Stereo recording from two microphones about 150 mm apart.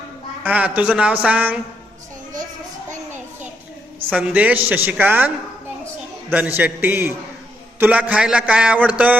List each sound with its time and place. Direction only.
0.4 s speech: 10° right (ahead or behind)
4.1 s speech: 10° right (ahead or behind)
6.3 s speech: 10° right (ahead or behind)